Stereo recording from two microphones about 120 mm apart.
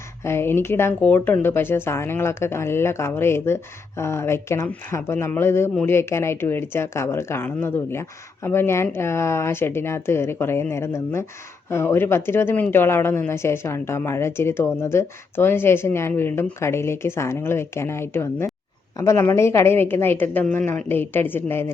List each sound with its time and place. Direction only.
0.3 s a woman's voice: 20° left (ahead or behind)